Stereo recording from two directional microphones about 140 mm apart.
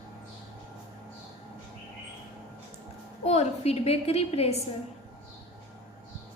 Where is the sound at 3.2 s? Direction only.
50° left (ahead or behind).